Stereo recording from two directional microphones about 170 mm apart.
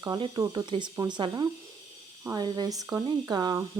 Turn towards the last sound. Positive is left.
turn(degrees=-25)  # may be behind; listen again after turning